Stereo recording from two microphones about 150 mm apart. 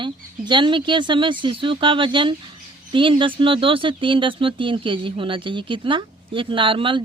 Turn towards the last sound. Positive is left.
turn(degrees=-35)  # may be behind; listen again after turning